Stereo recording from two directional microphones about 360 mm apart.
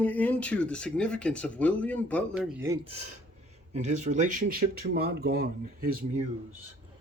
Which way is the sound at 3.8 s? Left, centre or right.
Centre.